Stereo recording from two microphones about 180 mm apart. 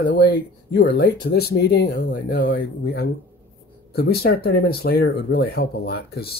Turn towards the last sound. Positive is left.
turn(degrees=60)  # may be behind; listen again after turning